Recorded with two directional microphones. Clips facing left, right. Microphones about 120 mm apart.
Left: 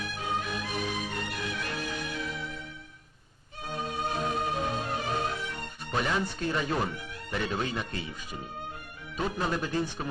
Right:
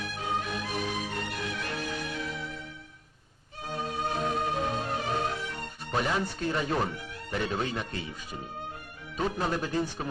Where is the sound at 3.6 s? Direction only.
35° right (ahead or behind).